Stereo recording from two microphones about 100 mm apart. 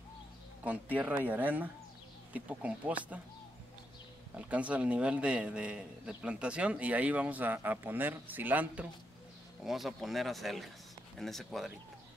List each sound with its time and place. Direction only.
0.9 s a man's voice: 15° right (ahead or behind)
4.4 s a man's voice: 15° right (ahead or behind)
9.7 s speech: centre (ahead or behind)